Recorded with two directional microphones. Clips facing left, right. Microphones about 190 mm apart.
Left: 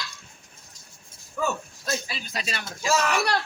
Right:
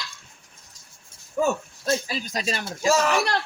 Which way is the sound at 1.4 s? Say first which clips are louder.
Right 5 dB; 30° right (ahead or behind).